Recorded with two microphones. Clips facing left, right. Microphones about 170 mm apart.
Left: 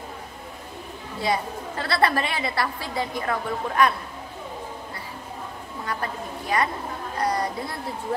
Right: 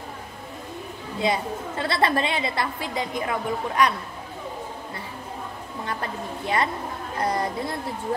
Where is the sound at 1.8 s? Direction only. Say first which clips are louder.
Even; 25° right (ahead or behind).